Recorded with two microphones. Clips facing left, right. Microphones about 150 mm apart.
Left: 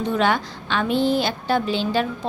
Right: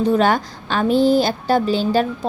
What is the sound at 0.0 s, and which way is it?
A woman's voice, 40° right (ahead or behind).